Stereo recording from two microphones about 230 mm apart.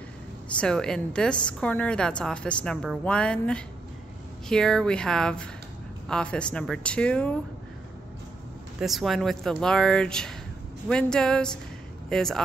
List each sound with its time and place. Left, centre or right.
0.6 s a woman's voice: centre
8.7 s a woman's voice: centre